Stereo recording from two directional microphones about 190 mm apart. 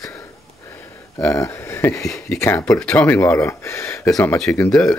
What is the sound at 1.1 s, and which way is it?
Speech, 15° left (ahead or behind).